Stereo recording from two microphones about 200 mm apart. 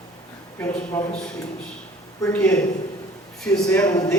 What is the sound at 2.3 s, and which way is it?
Speech, 10° left (ahead or behind).